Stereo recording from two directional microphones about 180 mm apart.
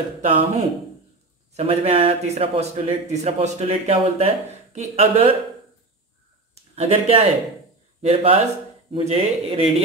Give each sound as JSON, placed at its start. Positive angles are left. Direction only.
{"t": 0.2, "sound": "speech", "side_deg": -35}
{"t": 6.7, "sound": "speech", "side_deg": -35}